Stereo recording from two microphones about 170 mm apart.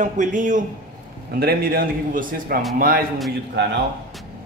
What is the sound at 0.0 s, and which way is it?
Speech, 45° right (ahead or behind).